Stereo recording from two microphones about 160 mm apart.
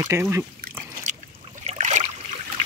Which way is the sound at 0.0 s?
20° right (ahead or behind).